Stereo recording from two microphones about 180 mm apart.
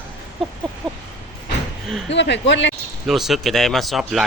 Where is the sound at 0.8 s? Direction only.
5° left (ahead or behind).